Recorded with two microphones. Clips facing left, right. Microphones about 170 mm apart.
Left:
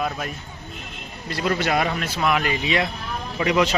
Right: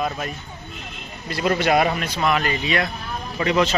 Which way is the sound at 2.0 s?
5° left (ahead or behind).